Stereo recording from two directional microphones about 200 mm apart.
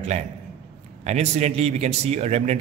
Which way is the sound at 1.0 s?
35° right (ahead or behind).